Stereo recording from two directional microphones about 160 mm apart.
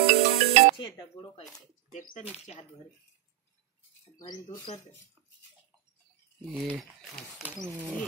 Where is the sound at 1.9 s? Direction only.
50° left (ahead or behind).